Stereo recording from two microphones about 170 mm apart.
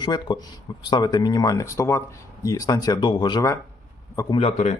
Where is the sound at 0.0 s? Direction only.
25° left (ahead or behind).